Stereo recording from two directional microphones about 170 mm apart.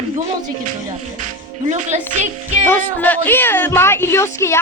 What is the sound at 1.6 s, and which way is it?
Speech, 45° right (ahead or behind).